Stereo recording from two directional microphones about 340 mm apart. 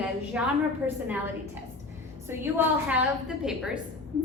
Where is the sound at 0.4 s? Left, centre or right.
Centre.